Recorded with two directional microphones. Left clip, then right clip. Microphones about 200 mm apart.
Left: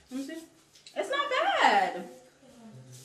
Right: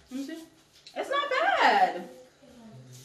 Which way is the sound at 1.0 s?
10° left (ahead or behind).